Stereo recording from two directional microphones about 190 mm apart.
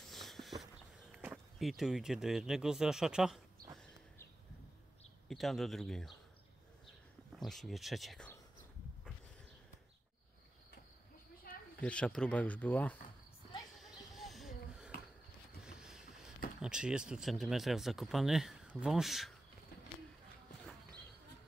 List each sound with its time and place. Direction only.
0.0 s walk: centre (ahead or behind)
5.3 s speech: centre (ahead or behind)
7.3 s speech: centre (ahead or behind)
11.5 s snake: 50° left (ahead or behind)
11.8 s speech: 5° left (ahead or behind)
13.7 s a sound: centre (ahead or behind)
14.9 s a sound: 50° left (ahead or behind)
15.6 s boat: 5° right (ahead or behind)
16.6 s speech: 5° right (ahead or behind)